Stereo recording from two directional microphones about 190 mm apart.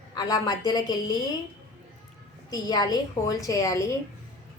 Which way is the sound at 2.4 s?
20° left (ahead or behind).